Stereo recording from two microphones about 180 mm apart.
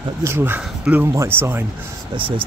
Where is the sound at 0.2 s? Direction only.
15° right (ahead or behind).